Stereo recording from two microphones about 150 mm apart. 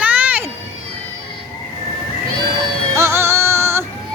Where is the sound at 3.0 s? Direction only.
15° right (ahead or behind).